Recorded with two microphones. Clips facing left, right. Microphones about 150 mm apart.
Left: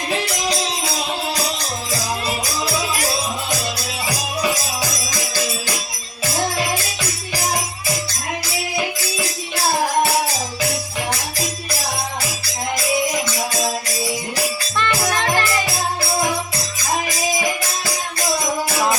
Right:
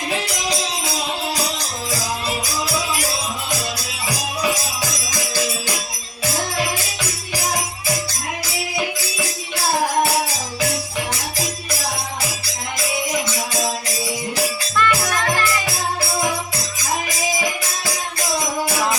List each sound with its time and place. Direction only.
14.8 s music: 25° left (ahead or behind)